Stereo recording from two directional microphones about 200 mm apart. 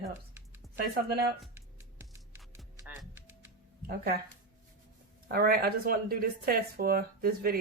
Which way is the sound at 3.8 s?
50° right (ahead or behind).